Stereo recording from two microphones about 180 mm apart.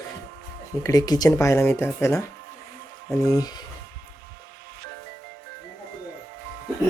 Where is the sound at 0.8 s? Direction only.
20° left (ahead or behind).